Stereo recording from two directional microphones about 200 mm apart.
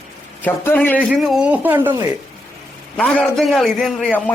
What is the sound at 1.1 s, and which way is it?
Speech, 5° right (ahead or behind).